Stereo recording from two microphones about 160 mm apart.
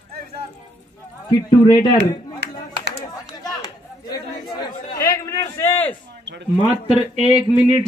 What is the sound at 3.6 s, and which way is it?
Chatter, 25° left (ahead or behind).